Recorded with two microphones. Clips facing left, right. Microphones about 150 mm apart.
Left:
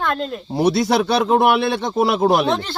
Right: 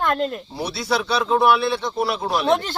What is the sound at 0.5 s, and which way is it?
Speech, 50° left (ahead or behind).